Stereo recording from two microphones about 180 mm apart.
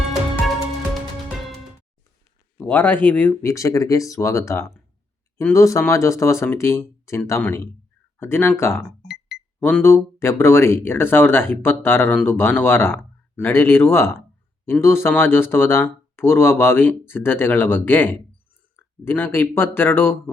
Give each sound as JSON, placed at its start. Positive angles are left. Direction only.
{"t": 2.6, "sound": "speech", "side_deg": 10}
{"t": 8.8, "sound": "music", "side_deg": 0}
{"t": 9.6, "sound": "speech", "side_deg": 10}